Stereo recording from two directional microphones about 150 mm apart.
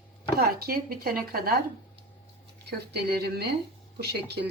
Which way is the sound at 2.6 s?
90° right.